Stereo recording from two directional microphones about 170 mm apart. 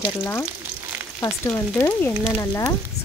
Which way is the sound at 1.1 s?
15° left (ahead or behind).